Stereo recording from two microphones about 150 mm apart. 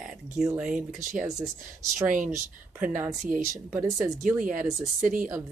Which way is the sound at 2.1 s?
60° right (ahead or behind).